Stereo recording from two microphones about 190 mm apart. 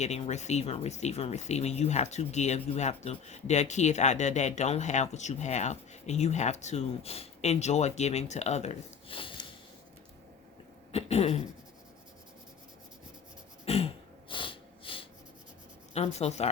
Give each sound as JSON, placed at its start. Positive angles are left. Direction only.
{"t": 0.0, "sound": "speech", "side_deg": 35}
{"t": 10.9, "sound": "speech", "side_deg": 30}
{"t": 13.7, "sound": "throat clearing", "side_deg": 30}
{"t": 15.9, "sound": "speech", "side_deg": 35}